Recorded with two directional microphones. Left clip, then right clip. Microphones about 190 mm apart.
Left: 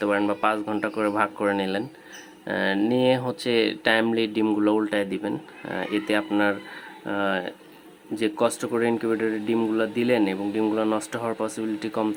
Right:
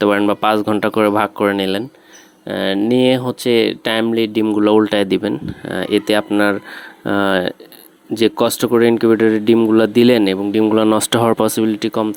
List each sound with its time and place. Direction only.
0.0 s speech: 45° right (ahead or behind)
8.1 s speech: 45° right (ahead or behind)